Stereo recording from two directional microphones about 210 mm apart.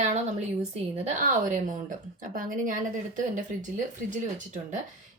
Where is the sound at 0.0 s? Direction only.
35° right (ahead or behind).